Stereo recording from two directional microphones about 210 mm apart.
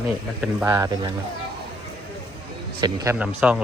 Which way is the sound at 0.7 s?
20° right (ahead or behind).